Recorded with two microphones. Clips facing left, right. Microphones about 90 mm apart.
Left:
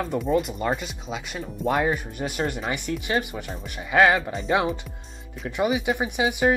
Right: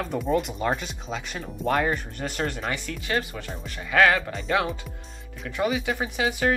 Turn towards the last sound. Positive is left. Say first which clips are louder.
# left 3 dB
turn(degrees=15)  # may be behind; listen again after turning